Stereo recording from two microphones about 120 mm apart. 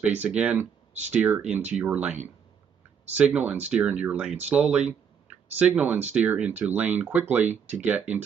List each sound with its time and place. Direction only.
0.0 s speech: 10° right (ahead or behind)
7.4 s speech: 70° right (ahead or behind)
7.8 s speech: 15° right (ahead or behind)